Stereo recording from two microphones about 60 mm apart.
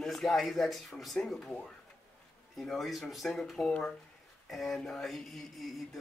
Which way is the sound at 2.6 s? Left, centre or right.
Centre.